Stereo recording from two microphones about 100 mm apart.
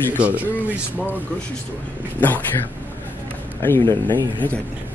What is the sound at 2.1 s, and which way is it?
Speech, 15° left (ahead or behind).